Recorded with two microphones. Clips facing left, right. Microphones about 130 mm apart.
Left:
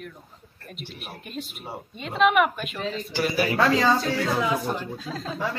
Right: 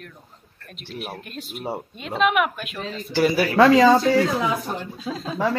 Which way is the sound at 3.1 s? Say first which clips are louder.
Right 6 dB; 90° right.